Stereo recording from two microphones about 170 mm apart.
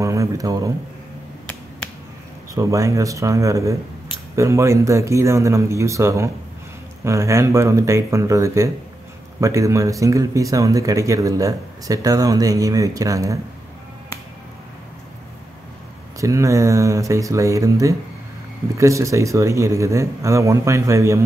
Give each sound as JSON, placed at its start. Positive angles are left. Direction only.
{"t": 0.0, "sound": "speech", "side_deg": -20}
{"t": 2.5, "sound": "a man's voice", "side_deg": -20}
{"t": 16.2, "sound": "a man's voice", "side_deg": -20}